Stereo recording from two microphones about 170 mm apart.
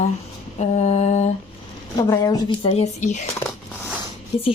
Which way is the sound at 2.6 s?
35° left (ahead or behind).